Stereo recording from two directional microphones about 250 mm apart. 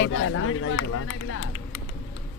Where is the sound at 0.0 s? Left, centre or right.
Left.